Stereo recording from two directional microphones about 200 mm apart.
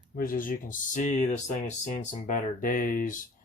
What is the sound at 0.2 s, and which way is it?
Speech, 45° left (ahead or behind).